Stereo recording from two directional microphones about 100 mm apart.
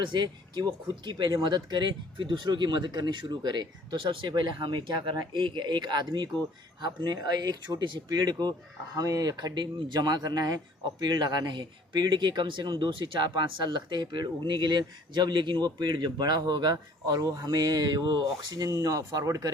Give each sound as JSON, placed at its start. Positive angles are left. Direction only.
{"t": 0.0, "sound": "speech", "side_deg": -50}